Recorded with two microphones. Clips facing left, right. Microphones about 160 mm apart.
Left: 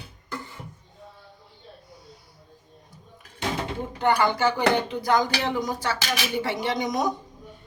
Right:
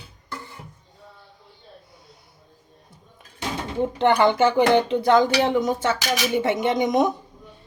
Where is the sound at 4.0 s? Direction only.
25° right (ahead or behind).